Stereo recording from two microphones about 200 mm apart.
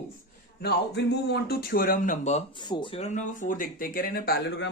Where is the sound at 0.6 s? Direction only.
55° left (ahead or behind).